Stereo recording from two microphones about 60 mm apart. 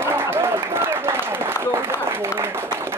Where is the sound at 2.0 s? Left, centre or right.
Right.